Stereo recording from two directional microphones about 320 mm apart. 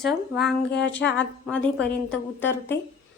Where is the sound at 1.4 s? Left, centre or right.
Centre.